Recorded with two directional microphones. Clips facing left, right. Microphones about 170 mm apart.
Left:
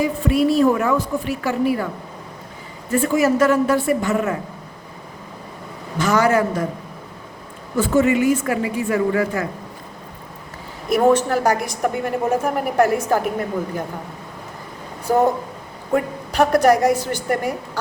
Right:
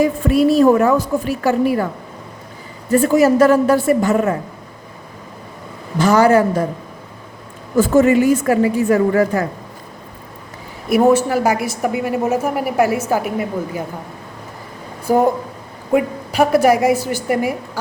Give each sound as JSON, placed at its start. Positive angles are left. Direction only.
{"t": 0.0, "sound": "a woman's voice", "side_deg": -40}
{"t": 2.9, "sound": "a woman's voice", "side_deg": -35}
{"t": 6.0, "sound": "a woman's voice", "side_deg": -35}
{"t": 7.8, "sound": "a woman's voice", "side_deg": -45}
{"t": 10.8, "sound": "a woman's voice", "side_deg": -10}
{"t": 15.0, "sound": "a woman's voice", "side_deg": -10}